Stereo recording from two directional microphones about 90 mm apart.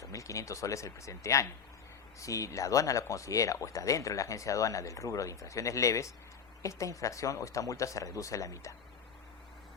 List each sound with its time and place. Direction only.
0.0 s speech: 35° left (ahead or behind)